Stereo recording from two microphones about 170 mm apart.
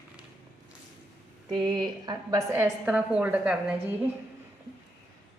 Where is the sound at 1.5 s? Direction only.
30° right (ahead or behind); by 4.0 s 10° right (ahead or behind).